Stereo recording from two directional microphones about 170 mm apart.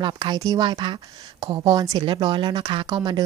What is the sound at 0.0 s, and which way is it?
Speech, 25° right (ahead or behind).